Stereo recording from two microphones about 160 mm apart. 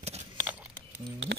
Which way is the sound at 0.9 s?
90° right.